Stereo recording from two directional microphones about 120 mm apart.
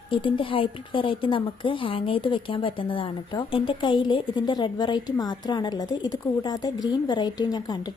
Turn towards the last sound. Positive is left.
turn(degrees=35)  # may be behind; listen again after turning